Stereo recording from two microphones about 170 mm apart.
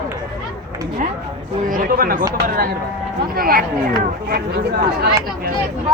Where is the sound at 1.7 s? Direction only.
55° right (ahead or behind).